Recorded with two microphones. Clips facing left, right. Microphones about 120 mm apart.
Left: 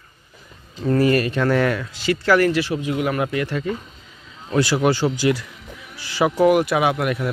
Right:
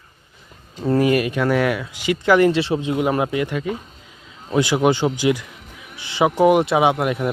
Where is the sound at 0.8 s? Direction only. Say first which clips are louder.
Even; 15° right (ahead or behind).